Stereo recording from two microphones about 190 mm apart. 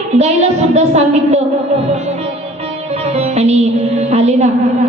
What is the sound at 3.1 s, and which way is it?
A woman's voice, 35° right (ahead or behind).